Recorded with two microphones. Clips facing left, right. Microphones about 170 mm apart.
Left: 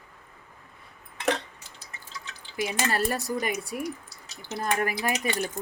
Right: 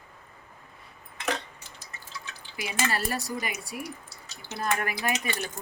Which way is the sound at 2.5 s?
45° left (ahead or behind).